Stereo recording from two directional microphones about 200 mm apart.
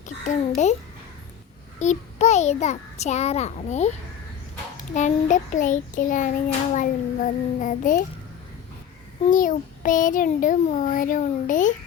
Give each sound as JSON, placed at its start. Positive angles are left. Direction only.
{"t": 0.3, "sound": "a child's voice", "side_deg": 35}
{"t": 1.8, "sound": "a child's voice", "side_deg": 35}
{"t": 4.9, "sound": "a child's voice", "side_deg": 40}
{"t": 9.2, "sound": "a child's voice", "side_deg": 40}